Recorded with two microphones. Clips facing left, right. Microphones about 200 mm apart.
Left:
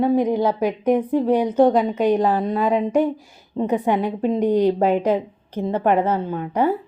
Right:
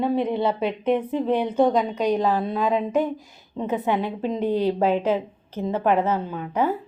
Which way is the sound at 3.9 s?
10° left (ahead or behind).